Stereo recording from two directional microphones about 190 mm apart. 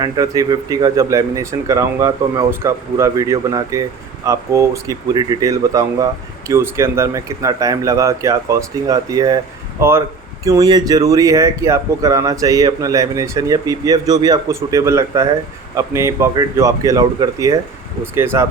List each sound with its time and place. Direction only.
0.0 s speech: 20° right (ahead or behind)